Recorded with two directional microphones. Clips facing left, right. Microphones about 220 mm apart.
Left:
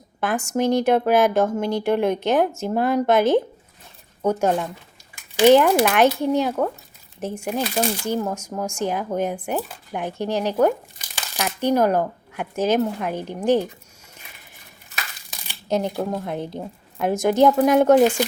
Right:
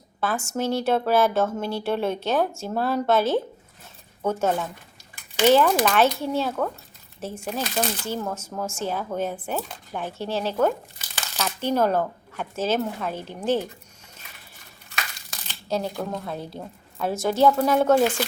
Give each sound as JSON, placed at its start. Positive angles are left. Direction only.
{"t": 0.2, "sound": "speech", "side_deg": 15}
{"t": 15.4, "sound": "a sound", "side_deg": 15}
{"t": 16.1, "sound": "speech", "side_deg": 20}